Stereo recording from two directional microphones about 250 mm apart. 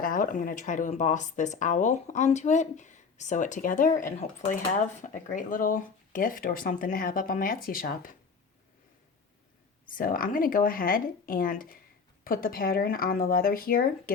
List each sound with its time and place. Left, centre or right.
0.0 s speech: left
9.8 s speech: left